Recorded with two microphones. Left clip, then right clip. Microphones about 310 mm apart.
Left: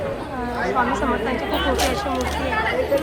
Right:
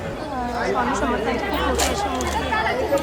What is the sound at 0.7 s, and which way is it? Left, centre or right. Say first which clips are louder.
Speech: left 2 dB; centre.